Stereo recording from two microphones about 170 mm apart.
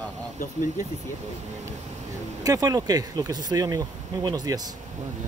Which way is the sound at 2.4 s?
20° right (ahead or behind).